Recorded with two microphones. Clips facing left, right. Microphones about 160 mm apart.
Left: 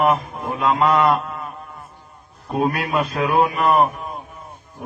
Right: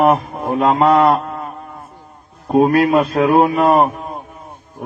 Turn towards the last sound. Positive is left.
turn(degrees=-45)  # may be behind; listen again after turning